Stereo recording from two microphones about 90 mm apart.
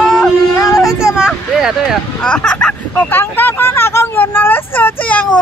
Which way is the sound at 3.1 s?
25° left (ahead or behind).